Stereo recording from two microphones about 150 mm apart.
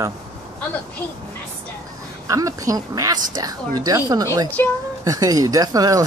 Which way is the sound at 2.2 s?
20° right (ahead or behind).